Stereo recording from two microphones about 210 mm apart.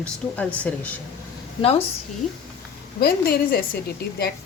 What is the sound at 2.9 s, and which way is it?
Speech, 45° left (ahead or behind).